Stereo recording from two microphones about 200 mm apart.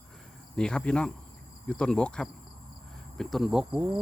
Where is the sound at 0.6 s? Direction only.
5° left (ahead or behind).